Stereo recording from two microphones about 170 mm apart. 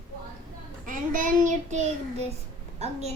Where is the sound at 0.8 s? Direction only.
50° right (ahead or behind).